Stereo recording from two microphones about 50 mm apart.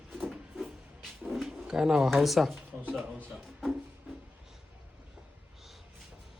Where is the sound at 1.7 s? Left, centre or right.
Centre.